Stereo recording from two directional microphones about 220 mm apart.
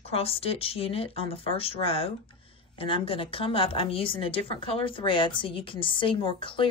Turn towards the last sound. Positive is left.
turn(degrees=25)  # may be behind; listen again after turning